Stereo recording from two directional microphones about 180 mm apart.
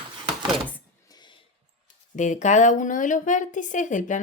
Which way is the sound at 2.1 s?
45° left (ahead or behind).